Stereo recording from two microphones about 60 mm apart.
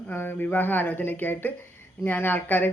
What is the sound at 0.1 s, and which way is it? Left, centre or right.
A man's voice, left.